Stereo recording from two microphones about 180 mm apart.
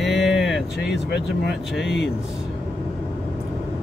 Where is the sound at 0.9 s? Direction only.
70° left (ahead or behind).